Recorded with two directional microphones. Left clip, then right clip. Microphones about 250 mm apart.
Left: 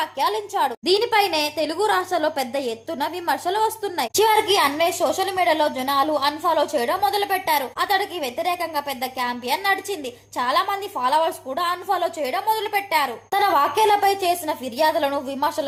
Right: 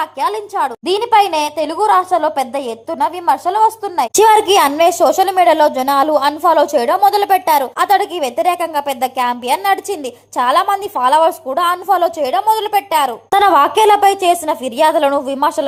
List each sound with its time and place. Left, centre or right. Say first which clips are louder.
0.0 s a woman's voice: right 5 dB; centre
4.1 s a woman's voice: right 8 dB; right